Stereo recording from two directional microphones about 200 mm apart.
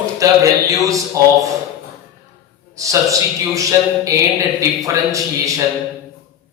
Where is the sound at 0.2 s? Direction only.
15° right (ahead or behind).